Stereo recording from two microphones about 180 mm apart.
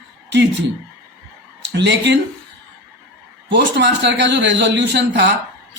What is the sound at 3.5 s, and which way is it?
A man's voice, 75° right (ahead or behind).